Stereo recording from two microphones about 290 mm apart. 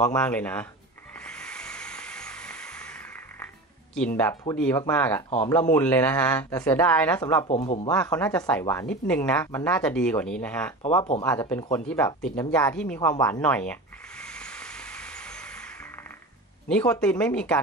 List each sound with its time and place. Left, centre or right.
0.0 s a woman's voice: centre
1.2 s a sound: centre
4.2 s speech: centre
7.4 s speech: left
7.9 s a woman's voice: centre
10.8 s speech: left
11.2 s a woman's voice: centre
13.2 s snake: centre
16.6 s a woman's voice: centre